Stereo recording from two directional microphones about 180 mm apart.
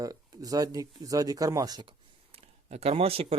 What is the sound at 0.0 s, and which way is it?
Speech, 20° right (ahead or behind).